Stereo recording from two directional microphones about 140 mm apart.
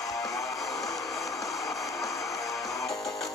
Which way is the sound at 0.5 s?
Centre (ahead or behind).